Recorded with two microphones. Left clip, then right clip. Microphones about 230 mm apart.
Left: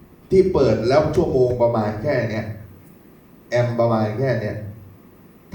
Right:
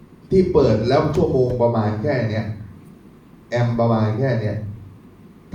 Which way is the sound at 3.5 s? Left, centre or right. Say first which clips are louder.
Left 1 dB; left.